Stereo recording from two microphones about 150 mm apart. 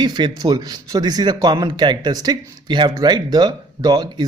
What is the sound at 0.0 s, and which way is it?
A man's voice, 30° right (ahead or behind).